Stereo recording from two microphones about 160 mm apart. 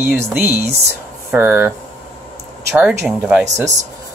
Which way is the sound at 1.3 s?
15° right (ahead or behind).